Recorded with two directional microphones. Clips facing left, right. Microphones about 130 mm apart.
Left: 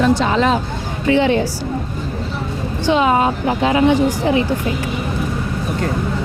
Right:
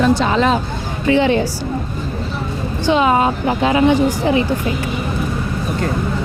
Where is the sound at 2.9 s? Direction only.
15° right (ahead or behind).